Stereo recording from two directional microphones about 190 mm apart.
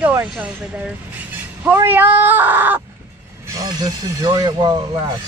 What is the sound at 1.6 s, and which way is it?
Speech, 10° right (ahead or behind).